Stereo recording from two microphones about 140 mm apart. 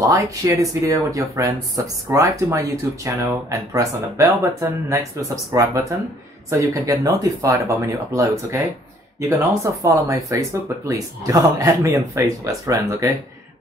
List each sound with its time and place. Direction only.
0.0 s speech: 20° right (ahead or behind)